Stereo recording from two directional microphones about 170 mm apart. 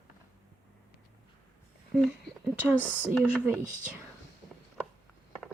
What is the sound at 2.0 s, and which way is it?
A woman's voice, 5° right (ahead or behind).